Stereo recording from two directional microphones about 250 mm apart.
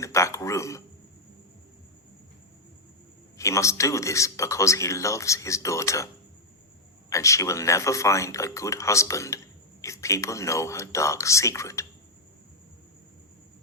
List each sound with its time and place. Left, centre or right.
0.0 s speech: centre
3.3 s speech: centre
7.1 s speech: centre